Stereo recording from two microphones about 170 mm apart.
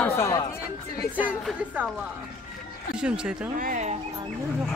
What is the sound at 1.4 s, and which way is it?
Speech, 5° right (ahead or behind).